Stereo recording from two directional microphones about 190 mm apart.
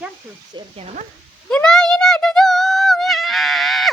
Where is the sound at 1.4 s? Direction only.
5° left (ahead or behind).